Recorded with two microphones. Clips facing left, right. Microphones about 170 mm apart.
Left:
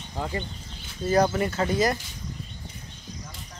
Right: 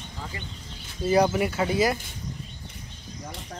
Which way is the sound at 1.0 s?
10° right (ahead or behind).